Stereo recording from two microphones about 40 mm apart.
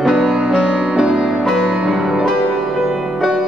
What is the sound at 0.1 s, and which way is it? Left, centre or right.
Music, right.